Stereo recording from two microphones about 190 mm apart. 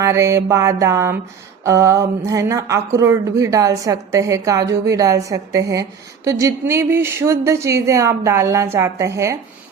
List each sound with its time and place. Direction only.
0.0 s speech: 15° right (ahead or behind)